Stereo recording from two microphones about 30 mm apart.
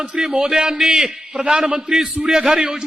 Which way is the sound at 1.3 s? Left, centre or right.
Right.